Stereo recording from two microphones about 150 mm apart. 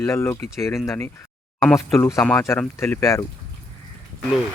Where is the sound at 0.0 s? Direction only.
15° left (ahead or behind).